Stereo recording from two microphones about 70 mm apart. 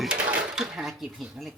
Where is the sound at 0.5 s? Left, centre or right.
Centre.